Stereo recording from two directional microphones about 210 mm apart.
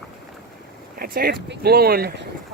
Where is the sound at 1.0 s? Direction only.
45° right (ahead or behind).